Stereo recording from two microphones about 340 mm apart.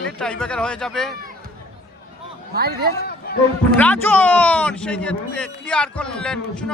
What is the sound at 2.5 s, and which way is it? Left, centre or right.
Speech, right.